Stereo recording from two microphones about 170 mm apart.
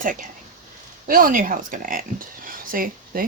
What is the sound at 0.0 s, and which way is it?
Speech, 50° right (ahead or behind).